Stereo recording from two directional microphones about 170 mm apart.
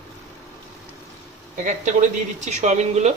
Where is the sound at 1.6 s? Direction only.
45° right (ahead or behind).